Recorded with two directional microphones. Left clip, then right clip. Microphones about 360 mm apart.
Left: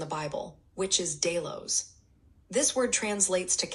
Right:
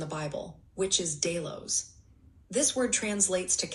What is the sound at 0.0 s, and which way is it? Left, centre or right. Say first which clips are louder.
A woman's voice: left 2 dB; centre.